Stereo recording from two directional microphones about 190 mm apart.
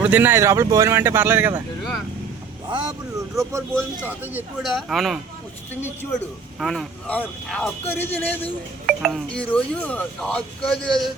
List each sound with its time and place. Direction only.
0.0 s speech: 10° right (ahead or behind)
2.6 s speech: 25° right (ahead or behind); by 5.2 s centre (ahead or behind)
6.6 s a man's voice: centre (ahead or behind)
8.9 s speech: centre (ahead or behind)